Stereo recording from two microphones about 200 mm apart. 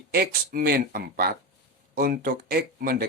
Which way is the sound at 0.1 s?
50° right (ahead or behind).